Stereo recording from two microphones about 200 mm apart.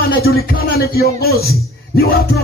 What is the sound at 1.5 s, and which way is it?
Music, 50° left (ahead or behind).